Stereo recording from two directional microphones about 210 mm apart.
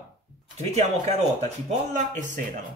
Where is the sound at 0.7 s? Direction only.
30° right (ahead or behind).